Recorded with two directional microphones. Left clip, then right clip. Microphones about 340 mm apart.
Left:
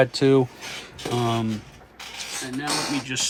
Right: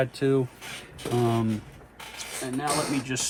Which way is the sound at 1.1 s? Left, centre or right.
Centre.